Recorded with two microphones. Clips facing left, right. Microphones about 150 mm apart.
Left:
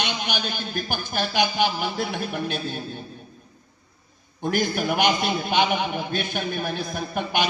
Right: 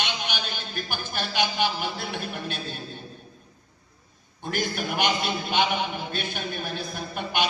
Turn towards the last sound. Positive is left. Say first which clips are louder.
# left 3 dB
turn(degrees=50)  # may be behind; listen again after turning